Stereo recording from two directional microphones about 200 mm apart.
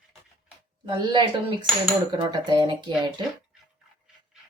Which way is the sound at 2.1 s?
20° right (ahead or behind).